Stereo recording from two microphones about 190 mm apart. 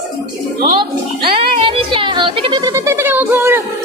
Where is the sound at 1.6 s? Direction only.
30° right (ahead or behind); by 3.6 s 10° right (ahead or behind).